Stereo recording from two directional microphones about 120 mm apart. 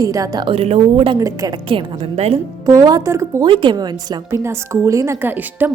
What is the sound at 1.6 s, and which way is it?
Speech, 45° right (ahead or behind).